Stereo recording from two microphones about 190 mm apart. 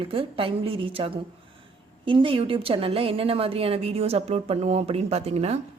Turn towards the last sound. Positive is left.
turn(degrees=-35)  # may be behind; listen again after turning